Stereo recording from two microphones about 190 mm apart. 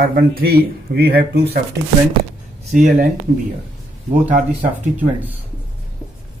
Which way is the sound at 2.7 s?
40° right (ahead or behind).